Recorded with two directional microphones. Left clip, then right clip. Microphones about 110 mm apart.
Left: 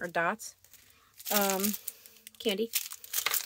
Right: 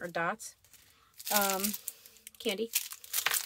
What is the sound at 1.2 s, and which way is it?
Speech, 35° left (ahead or behind).